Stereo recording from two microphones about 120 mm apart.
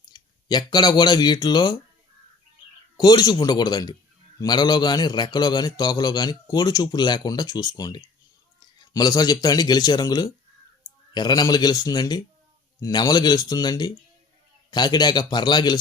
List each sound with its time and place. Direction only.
0.1 s speech: 35° left (ahead or behind)
3.0 s a man's voice: 35° left (ahead or behind)